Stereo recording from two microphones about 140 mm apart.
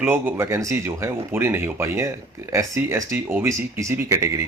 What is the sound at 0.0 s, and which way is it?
Speech, 15° right (ahead or behind).